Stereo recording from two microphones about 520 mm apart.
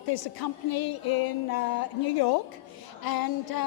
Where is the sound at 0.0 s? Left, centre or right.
Left.